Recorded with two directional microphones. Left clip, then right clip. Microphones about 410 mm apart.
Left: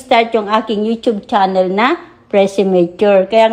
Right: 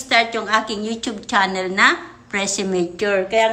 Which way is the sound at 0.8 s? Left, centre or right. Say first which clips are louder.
Left 10 dB; centre.